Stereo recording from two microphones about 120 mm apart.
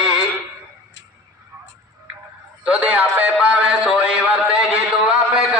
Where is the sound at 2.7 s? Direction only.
10° right (ahead or behind).